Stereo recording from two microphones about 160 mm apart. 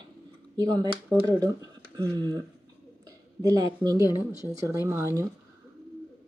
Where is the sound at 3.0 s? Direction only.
20° right (ahead or behind).